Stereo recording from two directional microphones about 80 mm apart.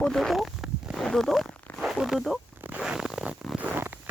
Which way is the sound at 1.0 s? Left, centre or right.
Centre.